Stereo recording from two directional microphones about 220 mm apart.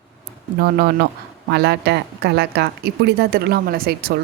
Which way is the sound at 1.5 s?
50° right (ahead or behind).